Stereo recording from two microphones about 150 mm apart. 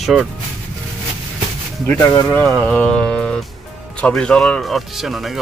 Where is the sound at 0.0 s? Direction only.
Centre (ahead or behind).